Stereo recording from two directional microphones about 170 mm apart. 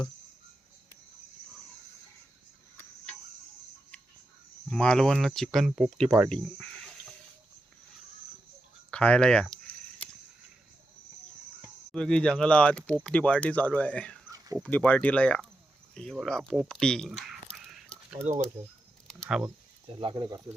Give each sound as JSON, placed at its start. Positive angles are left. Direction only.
{"t": 4.7, "sound": "speech", "side_deg": 5}
{"t": 8.9, "sound": "speech", "side_deg": 5}
{"t": 11.9, "sound": "speech", "side_deg": 5}
{"t": 14.3, "sound": "dog", "side_deg": -20}
{"t": 14.6, "sound": "speech", "side_deg": 10}
{"t": 16.6, "sound": "a sound", "side_deg": 5}
{"t": 18.2, "sound": "speech", "side_deg": -45}
{"t": 19.0, "sound": "a sound", "side_deg": 5}
{"t": 20.0, "sound": "speech", "side_deg": -25}